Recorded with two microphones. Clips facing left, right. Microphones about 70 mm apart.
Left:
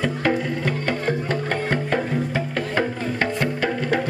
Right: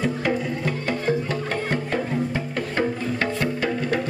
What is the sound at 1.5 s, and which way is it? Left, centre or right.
Music, left.